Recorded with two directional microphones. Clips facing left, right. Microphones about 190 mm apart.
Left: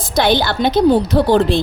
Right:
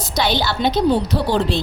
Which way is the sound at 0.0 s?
50° left (ahead or behind).